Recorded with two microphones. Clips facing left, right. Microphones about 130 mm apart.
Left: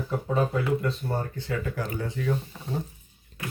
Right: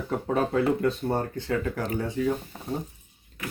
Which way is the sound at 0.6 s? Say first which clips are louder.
Right 3 dB; 45° right (ahead or behind).